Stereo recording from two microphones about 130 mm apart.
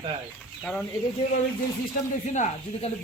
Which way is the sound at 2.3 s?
65° left (ahead or behind).